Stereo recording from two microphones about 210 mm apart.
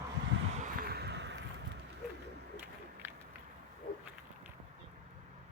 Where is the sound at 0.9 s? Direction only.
50° right (ahead or behind).